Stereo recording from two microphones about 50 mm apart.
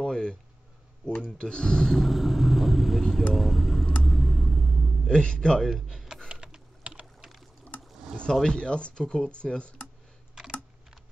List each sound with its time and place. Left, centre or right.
0.0 s a sound: centre
1.4 s a man's voice: centre
2.0 s vehicle: centre
5.0 s a man's voice: centre
5.7 s speech: centre
6.4 s typing: centre
7.2 s pour: centre
8.3 s speech: centre